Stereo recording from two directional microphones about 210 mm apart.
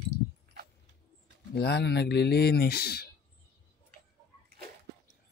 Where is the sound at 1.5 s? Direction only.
50° left (ahead or behind).